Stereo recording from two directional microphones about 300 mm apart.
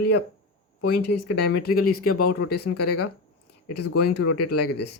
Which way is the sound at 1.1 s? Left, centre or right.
Left.